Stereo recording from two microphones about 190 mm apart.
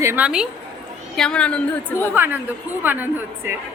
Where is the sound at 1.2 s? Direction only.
5° left (ahead or behind).